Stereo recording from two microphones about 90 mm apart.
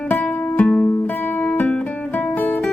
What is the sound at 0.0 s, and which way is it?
Music, 15° left (ahead or behind).